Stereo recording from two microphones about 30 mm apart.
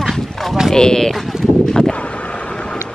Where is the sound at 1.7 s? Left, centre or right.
Left.